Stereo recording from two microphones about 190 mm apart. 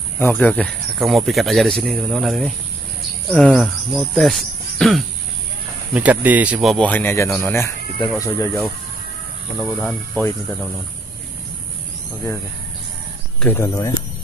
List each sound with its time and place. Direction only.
0.2 s speech: 5° left (ahead or behind)
9.6 s speech: 5° left (ahead or behind)
13.4 s speech: 10° left (ahead or behind)